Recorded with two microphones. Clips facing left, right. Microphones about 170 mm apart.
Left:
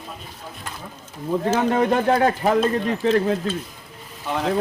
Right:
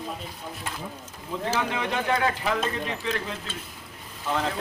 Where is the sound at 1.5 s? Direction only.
45° left (ahead or behind).